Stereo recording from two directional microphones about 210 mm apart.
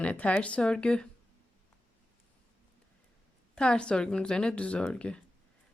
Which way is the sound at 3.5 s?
5° left (ahead or behind).